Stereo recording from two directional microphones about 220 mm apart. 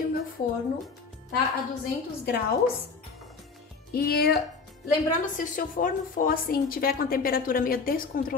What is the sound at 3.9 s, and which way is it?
A woman's voice, 45° left (ahead or behind).